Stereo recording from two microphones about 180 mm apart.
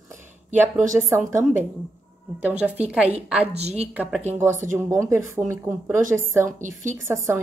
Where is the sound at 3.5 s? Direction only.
35° right (ahead or behind).